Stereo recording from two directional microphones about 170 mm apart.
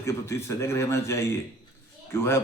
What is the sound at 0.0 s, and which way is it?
Speech, 15° left (ahead or behind).